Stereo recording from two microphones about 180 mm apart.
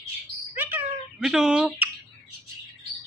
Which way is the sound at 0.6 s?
10° right (ahead or behind).